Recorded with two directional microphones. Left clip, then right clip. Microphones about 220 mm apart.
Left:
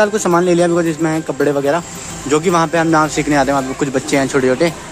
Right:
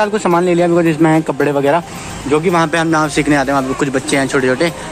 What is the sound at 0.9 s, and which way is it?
Speech, 5° right (ahead or behind).